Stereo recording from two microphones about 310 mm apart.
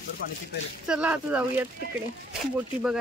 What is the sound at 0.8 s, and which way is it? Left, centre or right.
Speech, centre.